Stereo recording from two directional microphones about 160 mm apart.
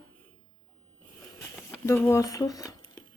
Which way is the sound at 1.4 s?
15° left (ahead or behind).